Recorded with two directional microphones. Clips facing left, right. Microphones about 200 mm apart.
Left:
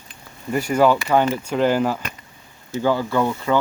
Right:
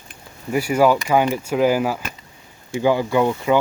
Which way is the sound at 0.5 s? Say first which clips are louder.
Right 1 dB; 10° right (ahead or behind).